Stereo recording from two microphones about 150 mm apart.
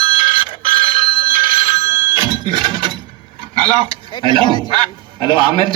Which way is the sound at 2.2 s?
30° right (ahead or behind).